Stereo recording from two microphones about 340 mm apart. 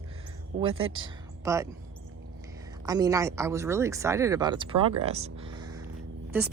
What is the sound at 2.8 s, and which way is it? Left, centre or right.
Speech, centre.